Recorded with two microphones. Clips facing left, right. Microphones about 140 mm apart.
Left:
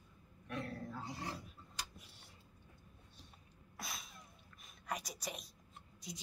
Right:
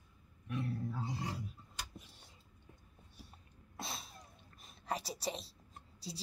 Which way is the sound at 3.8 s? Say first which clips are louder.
Right 4 dB; 30° right (ahead or behind).